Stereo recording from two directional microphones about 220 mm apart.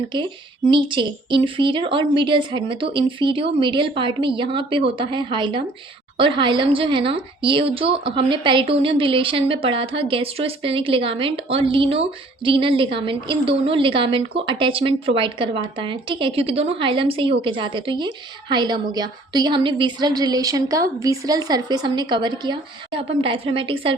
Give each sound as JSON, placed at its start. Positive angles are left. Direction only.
{"t": 0.1, "sound": "a woman's voice", "side_deg": -20}